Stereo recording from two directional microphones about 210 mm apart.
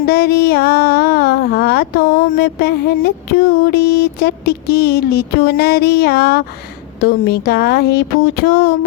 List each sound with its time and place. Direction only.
0.0 s child singing: 50° left (ahead or behind)
7.0 s speech: 50° left (ahead or behind)